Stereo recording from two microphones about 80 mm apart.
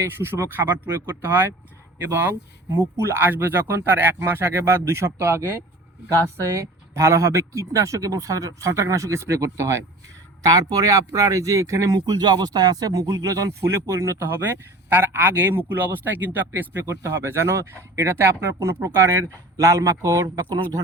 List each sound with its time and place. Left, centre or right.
0.0 s speech: right
10.4 s speech: right